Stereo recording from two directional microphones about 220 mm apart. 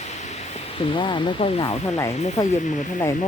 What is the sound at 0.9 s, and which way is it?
Speech, 20° left (ahead or behind).